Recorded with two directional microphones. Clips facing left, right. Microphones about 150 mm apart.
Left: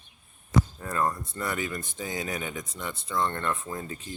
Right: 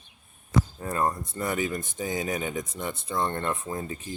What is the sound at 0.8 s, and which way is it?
Speech, 25° right (ahead or behind).